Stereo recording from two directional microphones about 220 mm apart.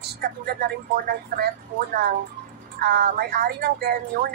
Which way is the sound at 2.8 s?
45° right (ahead or behind).